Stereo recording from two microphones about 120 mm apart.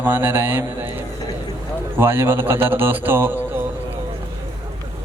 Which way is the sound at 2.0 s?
20° right (ahead or behind).